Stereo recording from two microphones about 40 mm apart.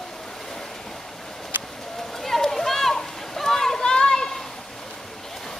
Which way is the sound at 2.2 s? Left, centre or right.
Centre.